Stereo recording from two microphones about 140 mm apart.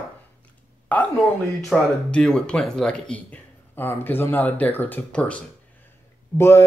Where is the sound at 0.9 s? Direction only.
10° left (ahead or behind).